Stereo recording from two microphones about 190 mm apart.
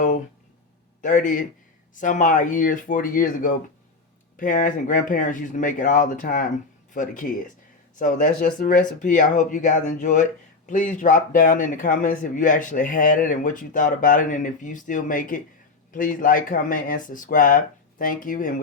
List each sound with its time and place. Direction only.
1.0 s speech: 40° left (ahead or behind)